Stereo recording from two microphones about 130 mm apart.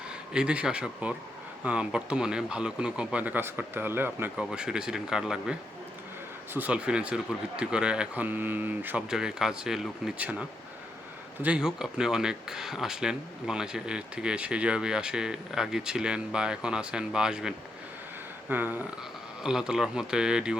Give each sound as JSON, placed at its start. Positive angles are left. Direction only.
{"t": 0.3, "sound": "speech", "side_deg": -5}
{"t": 11.4, "sound": "speech", "side_deg": -5}